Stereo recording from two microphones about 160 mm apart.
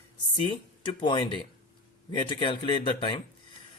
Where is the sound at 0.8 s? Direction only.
30° left (ahead or behind).